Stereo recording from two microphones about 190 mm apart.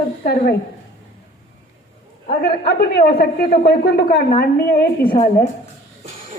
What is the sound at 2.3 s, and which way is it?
A woman's voice, 55° left (ahead or behind).